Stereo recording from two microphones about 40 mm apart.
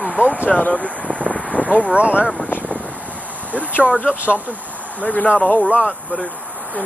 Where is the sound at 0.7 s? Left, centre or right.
Left.